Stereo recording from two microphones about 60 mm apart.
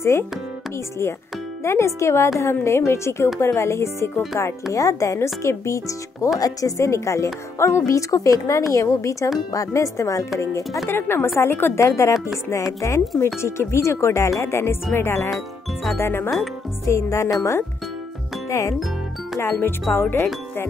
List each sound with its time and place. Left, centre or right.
1.6 s speech: left
4.7 s speech: left
6.4 s a woman's voice: left
6.9 s speech: left
10.9 s a woman's voice: left
11.8 s speech: left
13.2 s speech: left
15.3 s speech: centre
16.0 s a woman's voice: left
16.8 s speech: left
19.4 s a woman's voice: left